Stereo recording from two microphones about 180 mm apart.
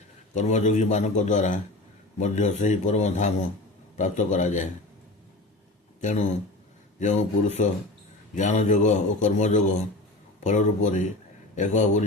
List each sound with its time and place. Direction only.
0.3 s a man's voice: 40° left (ahead or behind)
6.0 s a man's voice: 40° left (ahead or behind)